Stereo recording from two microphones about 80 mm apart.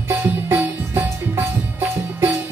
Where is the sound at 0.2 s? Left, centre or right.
Right.